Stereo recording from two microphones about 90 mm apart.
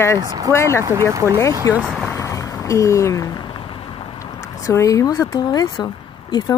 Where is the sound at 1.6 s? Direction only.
40° left (ahead or behind).